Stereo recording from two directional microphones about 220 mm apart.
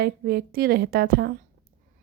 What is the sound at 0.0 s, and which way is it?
Speech, 45° right (ahead or behind).